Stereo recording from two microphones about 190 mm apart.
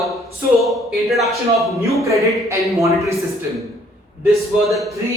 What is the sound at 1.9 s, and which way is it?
Speech, 15° right (ahead or behind).